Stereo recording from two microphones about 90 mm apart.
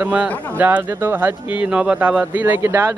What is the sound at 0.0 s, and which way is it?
A man's voice, 15° right (ahead or behind).